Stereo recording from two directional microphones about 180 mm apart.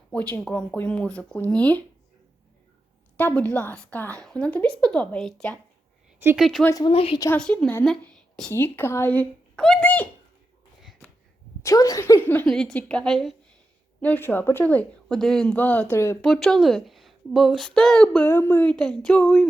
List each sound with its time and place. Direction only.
0.1 s a woman's voice: 10° left (ahead or behind)
3.2 s a woman's voice: 10° left (ahead or behind)
6.1 s speech: 15° right (ahead or behind)
6.4 s speech: centre (ahead or behind)
6.7 s speech: 20° left (ahead or behind)
6.9 s speech: 30° left (ahead or behind)
7.3 s a child's voice: 5° left (ahead or behind)
11.6 s a woman's voice: 20° left (ahead or behind)
16.2 s speech: centre (ahead or behind)